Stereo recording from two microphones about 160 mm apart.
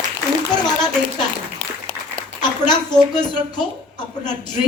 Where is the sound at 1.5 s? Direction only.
10° left (ahead or behind).